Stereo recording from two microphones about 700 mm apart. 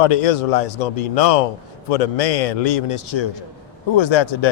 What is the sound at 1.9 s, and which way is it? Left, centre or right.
A man's voice, left.